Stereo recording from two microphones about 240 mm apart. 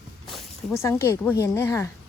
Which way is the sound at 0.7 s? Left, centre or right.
Centre.